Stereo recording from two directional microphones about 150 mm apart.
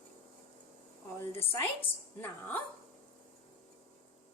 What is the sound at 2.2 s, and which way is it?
Speech, 10° left (ahead or behind).